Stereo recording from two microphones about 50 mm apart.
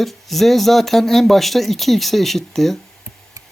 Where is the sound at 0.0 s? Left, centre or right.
Centre.